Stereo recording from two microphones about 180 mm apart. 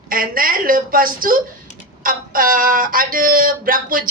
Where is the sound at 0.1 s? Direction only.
50° right (ahead or behind).